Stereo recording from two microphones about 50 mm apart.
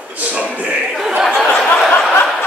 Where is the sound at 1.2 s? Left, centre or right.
Centre.